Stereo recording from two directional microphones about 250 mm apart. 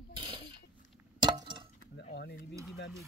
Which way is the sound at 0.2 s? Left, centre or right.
Centre.